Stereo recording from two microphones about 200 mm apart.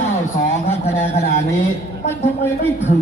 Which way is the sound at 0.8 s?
10° left (ahead or behind).